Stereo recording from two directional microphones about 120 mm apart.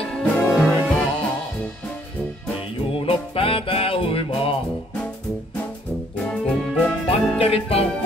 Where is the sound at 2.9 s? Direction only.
50° left (ahead or behind).